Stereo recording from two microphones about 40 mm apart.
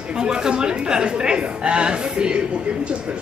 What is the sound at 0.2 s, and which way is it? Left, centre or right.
A woman's voice, centre.